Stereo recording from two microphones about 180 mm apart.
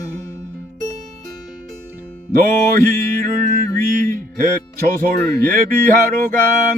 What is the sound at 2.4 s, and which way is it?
Music, 50° right (ahead or behind).